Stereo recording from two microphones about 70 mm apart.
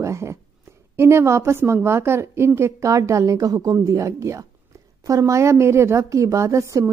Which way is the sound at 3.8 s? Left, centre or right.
Right.